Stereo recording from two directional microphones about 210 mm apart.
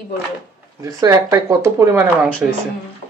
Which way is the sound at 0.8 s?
15° right (ahead or behind).